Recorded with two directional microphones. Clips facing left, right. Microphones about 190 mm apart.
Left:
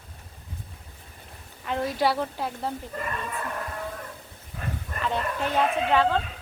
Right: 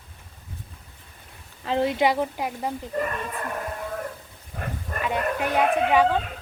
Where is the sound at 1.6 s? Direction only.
25° right (ahead or behind).